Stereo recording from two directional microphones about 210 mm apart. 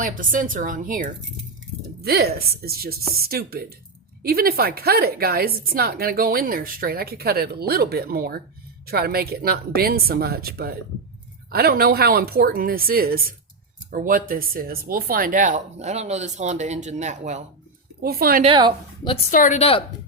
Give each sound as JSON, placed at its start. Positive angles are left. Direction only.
{"t": 0.0, "sound": "a woman's voice", "side_deg": -40}
{"t": 18.0, "sound": "a woman's voice", "side_deg": -45}
{"t": 18.4, "sound": "a woman's voice", "side_deg": -20}
{"t": 19.3, "sound": "speech", "side_deg": 35}